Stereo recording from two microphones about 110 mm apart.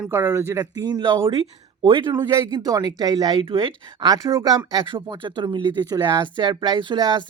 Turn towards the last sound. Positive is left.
turn(degrees=-45)  # may be behind; listen again after turning